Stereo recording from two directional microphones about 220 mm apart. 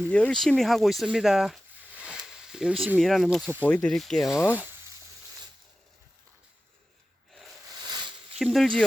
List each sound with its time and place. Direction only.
0.1 s speech: 5° left (ahead or behind)
7.9 s a sound: 20° right (ahead or behind)
8.4 s speech: centre (ahead or behind)